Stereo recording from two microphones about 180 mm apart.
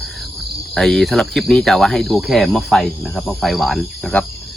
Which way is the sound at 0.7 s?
Centre (ahead or behind).